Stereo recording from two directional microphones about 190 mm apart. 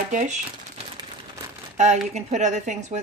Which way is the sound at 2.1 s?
40° right (ahead or behind).